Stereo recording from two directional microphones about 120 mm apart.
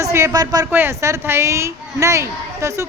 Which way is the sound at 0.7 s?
20° right (ahead or behind).